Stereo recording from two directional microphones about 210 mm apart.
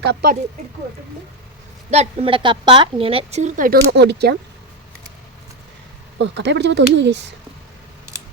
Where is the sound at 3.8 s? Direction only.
55° right (ahead or behind).